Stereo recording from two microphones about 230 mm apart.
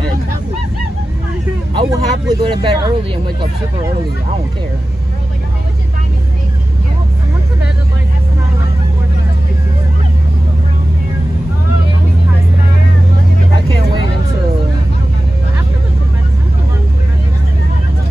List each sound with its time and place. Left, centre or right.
1.7 s speech: centre